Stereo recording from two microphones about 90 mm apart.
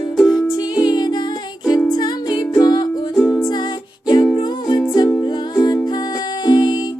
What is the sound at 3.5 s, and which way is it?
Music, 50° left (ahead or behind).